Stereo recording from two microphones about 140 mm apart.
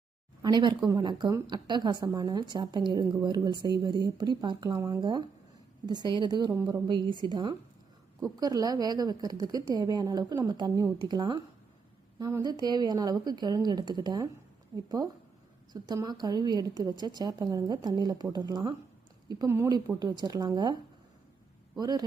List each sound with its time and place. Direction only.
0.4 s a woman's voice: 30° right (ahead or behind)
21.8 s a woman's voice: 30° right (ahead or behind)